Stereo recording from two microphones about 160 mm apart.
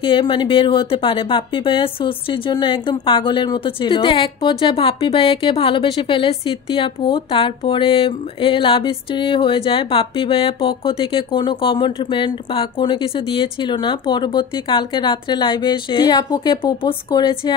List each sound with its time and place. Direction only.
0.0 s speech: 30° left (ahead or behind)